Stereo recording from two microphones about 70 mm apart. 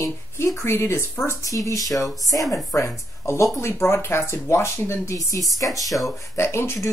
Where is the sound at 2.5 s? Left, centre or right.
Left.